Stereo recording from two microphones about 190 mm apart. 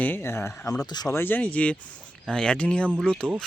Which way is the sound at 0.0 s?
10° left (ahead or behind).